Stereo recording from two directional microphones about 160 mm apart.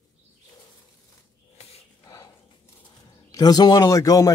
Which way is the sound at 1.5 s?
40° left (ahead or behind).